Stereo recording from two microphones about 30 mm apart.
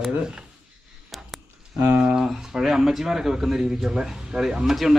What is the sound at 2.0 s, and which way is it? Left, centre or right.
Speech, right.